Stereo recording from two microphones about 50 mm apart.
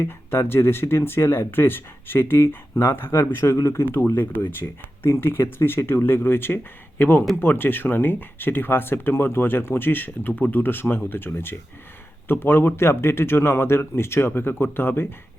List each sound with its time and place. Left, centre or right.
0.0 s speech: left
3.4 s speech: left
3.8 s speech: left
4.6 s speech: left